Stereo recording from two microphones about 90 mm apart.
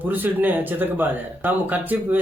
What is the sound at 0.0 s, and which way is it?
Speech, 20° right (ahead or behind).